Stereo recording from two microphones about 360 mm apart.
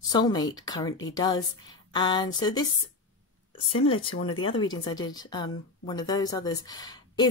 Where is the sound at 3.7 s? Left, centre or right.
Left.